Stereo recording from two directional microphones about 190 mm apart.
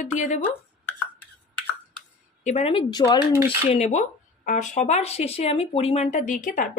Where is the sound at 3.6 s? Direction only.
40° left (ahead or behind).